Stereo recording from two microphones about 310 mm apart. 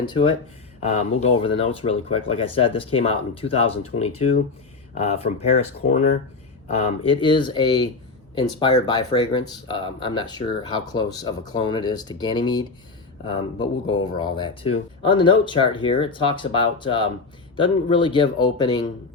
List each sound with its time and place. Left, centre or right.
0.0 s speech: centre